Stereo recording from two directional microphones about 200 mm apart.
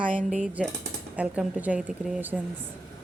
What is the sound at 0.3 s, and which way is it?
A woman's voice, 5° right (ahead or behind).